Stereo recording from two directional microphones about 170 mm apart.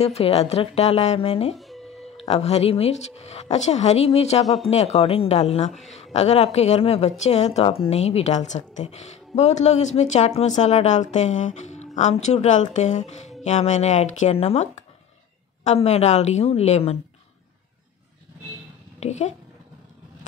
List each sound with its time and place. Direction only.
0.0 s a woman's voice: 35° left (ahead or behind)
1.5 s music: centre (ahead or behind)
2.2 s a woman's voice: 40° left (ahead or behind)
18.9 s speech: 40° left (ahead or behind)